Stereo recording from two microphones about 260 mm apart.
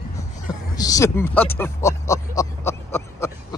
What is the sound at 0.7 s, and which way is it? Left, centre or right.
Speech, centre.